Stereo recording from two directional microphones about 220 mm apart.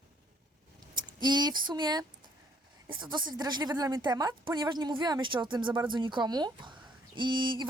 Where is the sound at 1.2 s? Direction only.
20° right (ahead or behind).